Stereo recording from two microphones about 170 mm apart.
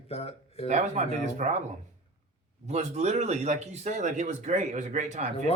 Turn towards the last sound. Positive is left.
turn(degrees=-45)  # may be behind; listen again after turning